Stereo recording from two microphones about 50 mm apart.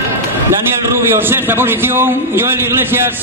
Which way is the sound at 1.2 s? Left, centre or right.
Right.